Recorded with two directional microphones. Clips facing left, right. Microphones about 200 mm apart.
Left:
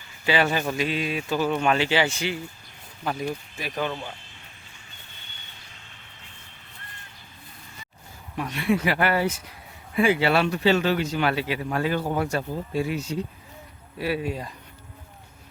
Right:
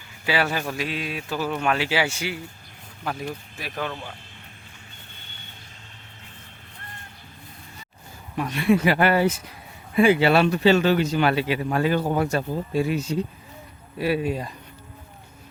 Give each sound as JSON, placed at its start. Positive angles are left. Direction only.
{"t": 0.3, "sound": "speech", "side_deg": -5}
{"t": 8.5, "sound": "speech", "side_deg": -35}
{"t": 12.0, "sound": "speech", "side_deg": -45}
{"t": 14.0, "sound": "speech", "side_deg": -20}